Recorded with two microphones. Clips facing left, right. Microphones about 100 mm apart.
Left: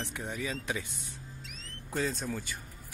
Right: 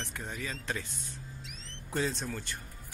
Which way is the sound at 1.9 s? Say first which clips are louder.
Even; centre (ahead or behind).